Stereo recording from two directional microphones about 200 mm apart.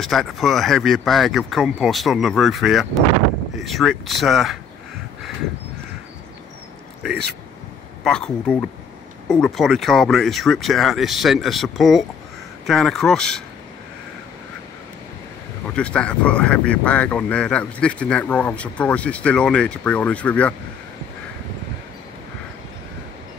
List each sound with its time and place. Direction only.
0.0 s speech: centre (ahead or behind)
8.0 s speech: 5° left (ahead or behind)
15.7 s speech: 5° left (ahead or behind)